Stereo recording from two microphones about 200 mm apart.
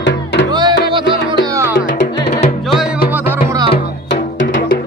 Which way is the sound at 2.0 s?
55° left (ahead or behind).